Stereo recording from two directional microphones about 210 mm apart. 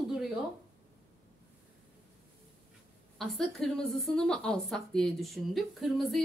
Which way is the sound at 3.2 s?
Centre (ahead or behind).